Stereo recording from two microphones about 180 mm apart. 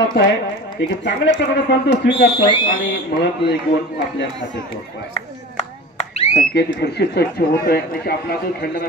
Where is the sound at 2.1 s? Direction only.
25° left (ahead or behind).